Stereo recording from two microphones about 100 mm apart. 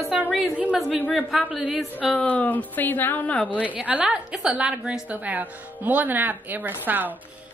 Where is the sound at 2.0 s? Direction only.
10° left (ahead or behind).